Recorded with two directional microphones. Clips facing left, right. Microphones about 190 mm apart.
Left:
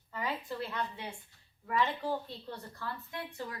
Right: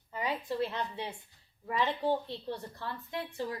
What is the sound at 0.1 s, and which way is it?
A woman's voice, 20° right (ahead or behind).